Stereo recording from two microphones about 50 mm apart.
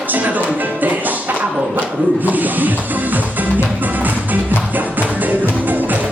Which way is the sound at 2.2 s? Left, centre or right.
Right.